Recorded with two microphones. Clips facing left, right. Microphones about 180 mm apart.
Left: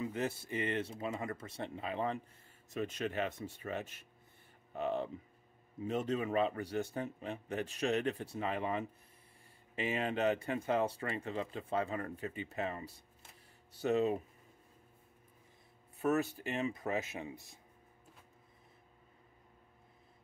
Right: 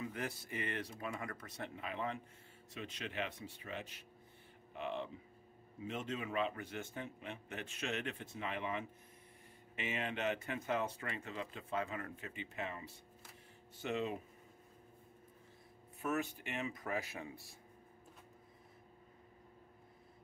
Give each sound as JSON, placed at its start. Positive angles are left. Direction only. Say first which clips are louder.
{"t": 0.0, "sound": "speech", "louder": "left 6 dB", "side_deg": 25}
{"t": 2.7, "sound": "speech", "louder": "left 8 dB", "side_deg": 45}
{"t": 16.0, "sound": "speech", "louder": "left 6 dB", "side_deg": 35}